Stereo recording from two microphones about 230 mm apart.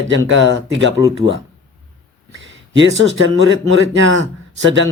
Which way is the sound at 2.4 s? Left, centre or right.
Right.